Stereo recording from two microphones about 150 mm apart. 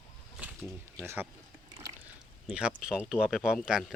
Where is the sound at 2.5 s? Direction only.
5° right (ahead or behind).